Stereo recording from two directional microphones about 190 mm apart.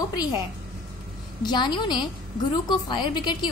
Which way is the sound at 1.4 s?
20° left (ahead or behind).